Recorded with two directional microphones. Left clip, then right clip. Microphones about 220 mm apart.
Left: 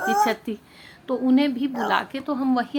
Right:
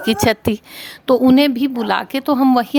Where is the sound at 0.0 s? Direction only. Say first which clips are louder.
Right 4 dB; 50° right (ahead or behind).